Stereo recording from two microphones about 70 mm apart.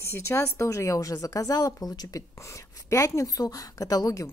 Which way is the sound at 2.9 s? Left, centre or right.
Left.